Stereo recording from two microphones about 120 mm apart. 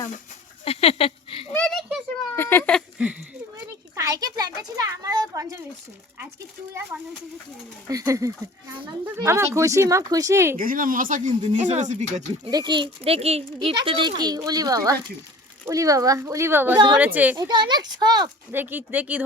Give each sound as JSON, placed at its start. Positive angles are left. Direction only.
{"t": 0.6, "sound": "a sound", "side_deg": 55}
{"t": 1.5, "sound": "a sound", "side_deg": 5}
{"t": 2.3, "sound": "a sound", "side_deg": 20}
{"t": 3.9, "sound": "a sound", "side_deg": -30}
{"t": 4.8, "sound": "a child's voice", "side_deg": -30}
{"t": 7.9, "sound": "speech", "side_deg": -30}
{"t": 10.9, "sound": "speech", "side_deg": -90}
{"t": 12.5, "sound": "speech", "side_deg": -35}
{"t": 13.1, "sound": "speech", "side_deg": -60}
{"t": 16.7, "sound": "speech", "side_deg": -40}
{"t": 17.0, "sound": "speech", "side_deg": -15}
{"t": 17.5, "sound": "speech", "side_deg": -35}
{"t": 18.5, "sound": "speech", "side_deg": -15}